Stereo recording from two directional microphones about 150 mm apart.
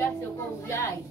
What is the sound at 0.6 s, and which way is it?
Speech, 20° left (ahead or behind).